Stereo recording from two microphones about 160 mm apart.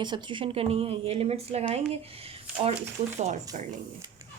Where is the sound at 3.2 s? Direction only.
45° right (ahead or behind).